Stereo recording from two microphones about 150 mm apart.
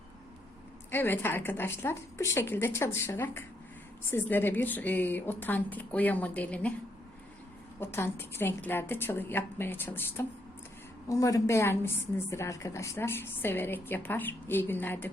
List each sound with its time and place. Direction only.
0.9 s a woman's voice: 15° left (ahead or behind)
7.8 s a woman's voice: 15° left (ahead or behind)